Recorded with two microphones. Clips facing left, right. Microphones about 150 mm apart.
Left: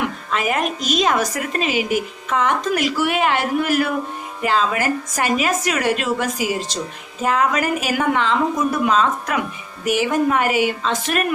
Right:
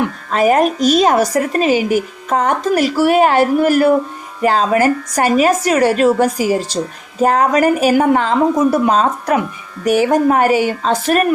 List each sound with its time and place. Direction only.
0.3 s a woman's voice: 40° right (ahead or behind)